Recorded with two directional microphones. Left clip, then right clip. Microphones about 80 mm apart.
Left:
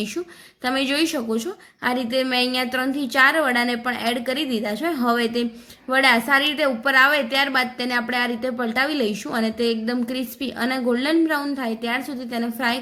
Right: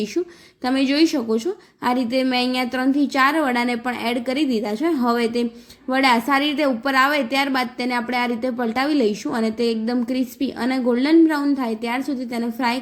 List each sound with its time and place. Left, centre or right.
0.6 s a woman's voice: centre